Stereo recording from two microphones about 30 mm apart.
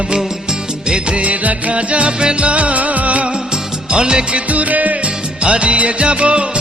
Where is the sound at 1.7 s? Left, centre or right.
Right.